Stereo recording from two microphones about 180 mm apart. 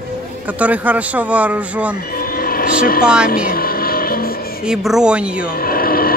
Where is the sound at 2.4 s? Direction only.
55° left (ahead or behind).